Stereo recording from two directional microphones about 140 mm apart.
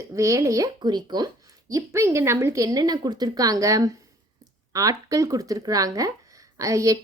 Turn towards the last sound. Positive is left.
turn(degrees=-25)  # may be behind; listen again after turning